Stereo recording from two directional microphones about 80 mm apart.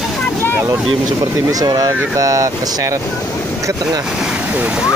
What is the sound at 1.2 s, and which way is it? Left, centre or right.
Speech, right.